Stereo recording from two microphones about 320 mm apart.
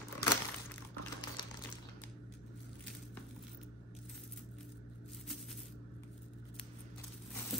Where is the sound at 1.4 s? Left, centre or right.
Centre.